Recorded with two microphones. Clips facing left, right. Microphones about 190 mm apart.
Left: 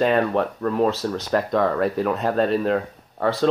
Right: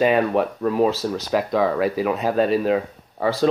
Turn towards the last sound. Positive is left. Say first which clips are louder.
# right 1 dB
turn(degrees=-5)  # may be behind; listen again after turning